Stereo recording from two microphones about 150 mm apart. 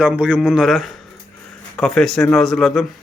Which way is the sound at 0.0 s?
5° right (ahead or behind).